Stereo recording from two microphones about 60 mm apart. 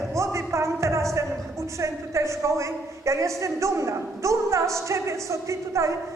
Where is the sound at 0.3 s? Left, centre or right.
Right.